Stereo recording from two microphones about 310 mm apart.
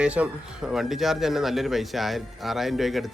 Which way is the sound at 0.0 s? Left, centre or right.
Centre.